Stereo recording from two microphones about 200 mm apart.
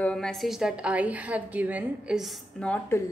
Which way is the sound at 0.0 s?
5° left (ahead or behind).